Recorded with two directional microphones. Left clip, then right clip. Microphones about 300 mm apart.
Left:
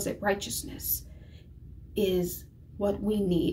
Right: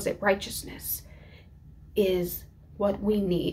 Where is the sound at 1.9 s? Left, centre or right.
Centre.